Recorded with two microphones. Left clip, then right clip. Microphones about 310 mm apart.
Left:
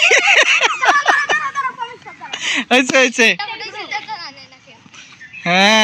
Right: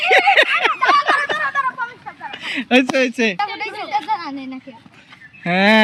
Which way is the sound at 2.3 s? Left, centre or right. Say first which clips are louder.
Left 2 dB; centre.